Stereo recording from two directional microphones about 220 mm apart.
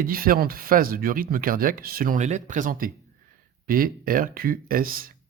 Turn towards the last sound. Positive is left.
turn(degrees=-40)  # may be behind; listen again after turning